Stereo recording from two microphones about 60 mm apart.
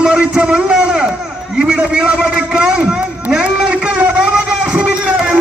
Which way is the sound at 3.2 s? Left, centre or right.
Centre.